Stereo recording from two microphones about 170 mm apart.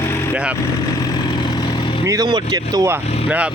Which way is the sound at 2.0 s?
20° right (ahead or behind).